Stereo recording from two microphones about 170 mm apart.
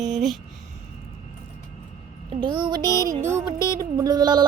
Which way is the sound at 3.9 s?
25° right (ahead or behind).